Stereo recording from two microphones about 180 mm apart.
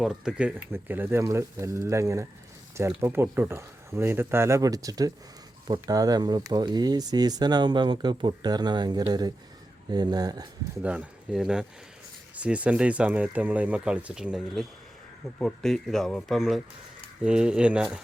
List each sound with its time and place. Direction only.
0.0 s speech: 5° right (ahead or behind); by 10.4 s 20° right (ahead or behind)
10.8 s speech: 5° right (ahead or behind)